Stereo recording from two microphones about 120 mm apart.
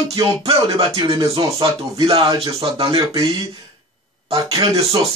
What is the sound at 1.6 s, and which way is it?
A man's voice, 45° right (ahead or behind).